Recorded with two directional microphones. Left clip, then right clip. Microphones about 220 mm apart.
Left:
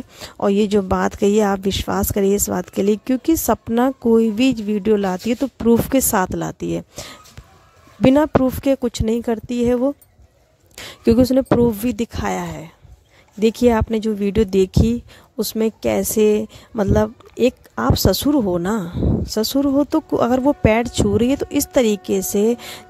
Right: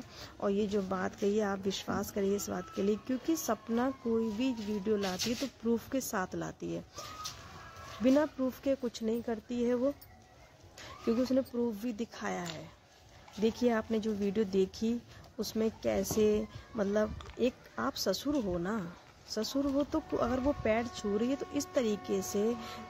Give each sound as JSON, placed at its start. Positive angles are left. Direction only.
{"t": 0.4, "sound": "speech", "side_deg": 45}